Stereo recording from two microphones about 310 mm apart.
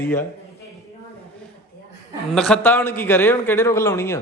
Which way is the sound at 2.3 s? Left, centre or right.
Centre.